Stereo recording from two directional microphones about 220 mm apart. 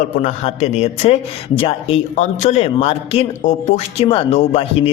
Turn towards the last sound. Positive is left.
turn(degrees=25)  # may be behind; listen again after turning